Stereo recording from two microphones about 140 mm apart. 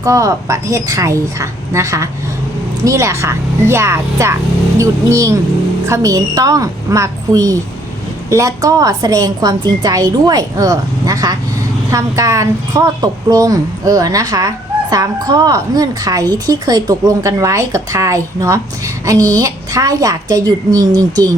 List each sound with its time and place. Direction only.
0.0 s a woman's voice: 25° right (ahead or behind)